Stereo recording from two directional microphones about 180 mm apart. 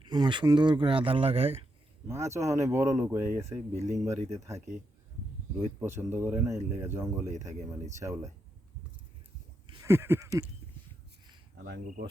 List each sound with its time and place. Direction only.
0.0 s speech: 25° right (ahead or behind)
2.0 s speech: 15° right (ahead or behind)
9.8 s speech: 15° right (ahead or behind)
11.5 s speech: 60° right (ahead or behind)